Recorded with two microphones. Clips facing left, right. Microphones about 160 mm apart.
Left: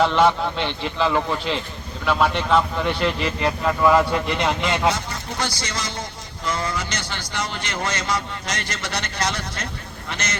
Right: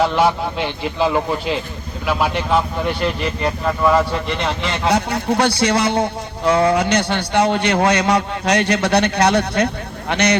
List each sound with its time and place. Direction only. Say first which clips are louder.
0.0 s speech: right 1 dB; 5° right (ahead or behind)
4.9 s a man's voice: right 7 dB; 65° right (ahead or behind)